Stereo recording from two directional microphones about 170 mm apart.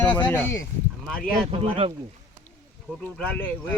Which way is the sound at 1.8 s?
35° right (ahead or behind).